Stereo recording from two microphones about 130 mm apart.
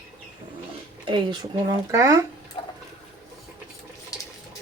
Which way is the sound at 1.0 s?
35° right (ahead or behind).